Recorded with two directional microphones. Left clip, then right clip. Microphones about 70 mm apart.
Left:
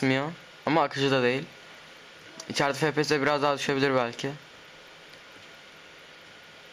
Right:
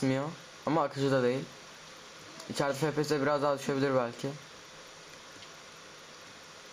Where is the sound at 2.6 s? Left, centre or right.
Left.